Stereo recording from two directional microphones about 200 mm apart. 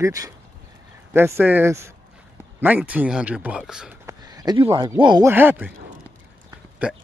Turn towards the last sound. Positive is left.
turn(degrees=-5)  # may be behind; listen again after turning